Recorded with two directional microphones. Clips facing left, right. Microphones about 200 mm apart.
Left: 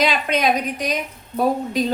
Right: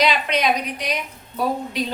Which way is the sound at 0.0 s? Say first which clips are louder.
Left 1 dB; 50° left (ahead or behind).